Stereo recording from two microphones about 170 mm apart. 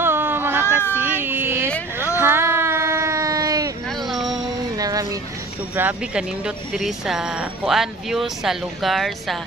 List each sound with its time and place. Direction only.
0.0 s cat: 15° right (ahead or behind)
0.6 s cat: 15° left (ahead or behind)
0.9 s speech: 10° right (ahead or behind)
2.1 s a sound: 15° right (ahead or behind)
3.8 s music: centre (ahead or behind)
4.4 s music: 20° right (ahead or behind)
5.7 s speech: 10° right (ahead or behind)